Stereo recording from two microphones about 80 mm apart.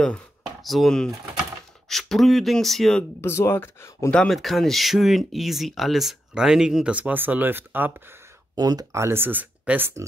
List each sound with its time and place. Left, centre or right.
0.6 s speech: centre
3.2 s speech: left
4.1 s speech: centre
4.4 s speech: centre; by 8.2 s right
8.5 s speech: right
8.9 s speech: right